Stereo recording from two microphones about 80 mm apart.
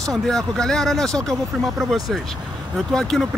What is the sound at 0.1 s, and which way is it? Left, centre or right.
Speech, centre.